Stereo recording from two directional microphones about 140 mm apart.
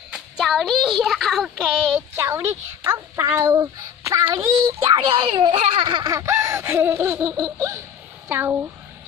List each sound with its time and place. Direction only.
0.1 s speech: centre (ahead or behind)
2.1 s a child's voice: 20° right (ahead or behind)